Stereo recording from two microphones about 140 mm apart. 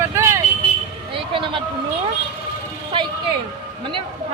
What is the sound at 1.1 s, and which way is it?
Speech, 40° right (ahead or behind).